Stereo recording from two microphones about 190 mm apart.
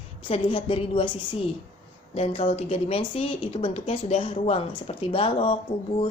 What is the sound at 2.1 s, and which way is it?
Speech, 30° left (ahead or behind).